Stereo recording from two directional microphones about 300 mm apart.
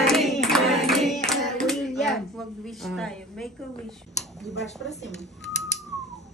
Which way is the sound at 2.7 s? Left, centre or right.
Centre.